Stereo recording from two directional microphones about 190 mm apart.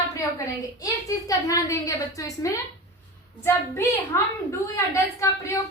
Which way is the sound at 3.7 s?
15° left (ahead or behind).